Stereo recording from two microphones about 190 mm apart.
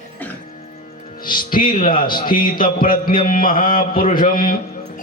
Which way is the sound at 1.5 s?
45° left (ahead or behind).